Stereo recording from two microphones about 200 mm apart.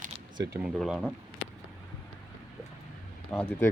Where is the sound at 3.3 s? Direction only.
5° left (ahead or behind).